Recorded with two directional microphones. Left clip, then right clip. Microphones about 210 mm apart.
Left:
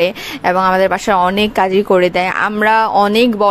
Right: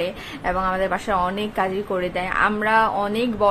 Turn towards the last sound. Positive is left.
turn(degrees=45)  # may be behind; listen again after turning